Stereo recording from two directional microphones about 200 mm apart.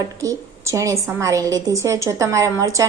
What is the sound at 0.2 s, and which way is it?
A woman's voice, 15° right (ahead or behind).